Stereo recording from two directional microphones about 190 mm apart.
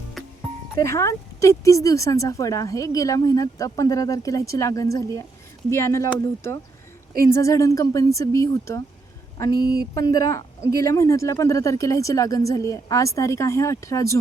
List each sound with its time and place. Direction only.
0.2 s music: centre (ahead or behind)
0.8 s a woman's voice: 15° left (ahead or behind)
9.5 s speech: 55° right (ahead or behind)
9.9 s a woman's voice: 20° left (ahead or behind)